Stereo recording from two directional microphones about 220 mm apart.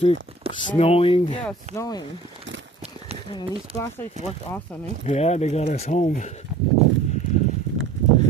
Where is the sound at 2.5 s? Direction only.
55° right (ahead or behind).